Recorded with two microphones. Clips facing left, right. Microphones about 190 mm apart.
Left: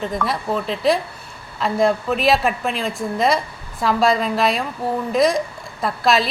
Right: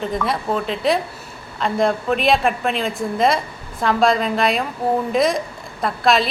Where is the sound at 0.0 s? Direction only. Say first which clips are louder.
Right 1 dB; centre (ahead or behind).